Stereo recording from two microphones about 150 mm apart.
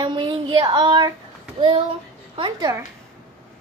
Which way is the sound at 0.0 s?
30° right (ahead or behind).